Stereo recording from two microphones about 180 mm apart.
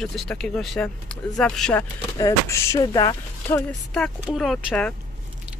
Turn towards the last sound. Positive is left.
turn(degrees=5)  # may be behind; listen again after turning